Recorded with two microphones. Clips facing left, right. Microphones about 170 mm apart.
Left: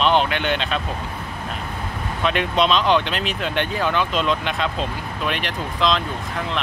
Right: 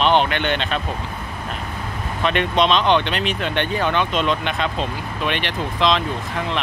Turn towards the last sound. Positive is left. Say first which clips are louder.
# right 2 dB
turn(degrees=0)  # may be behind; listen again after turning